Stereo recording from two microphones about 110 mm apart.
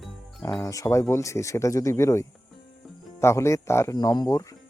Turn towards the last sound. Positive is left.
turn(degrees=30)  # may be behind; listen again after turning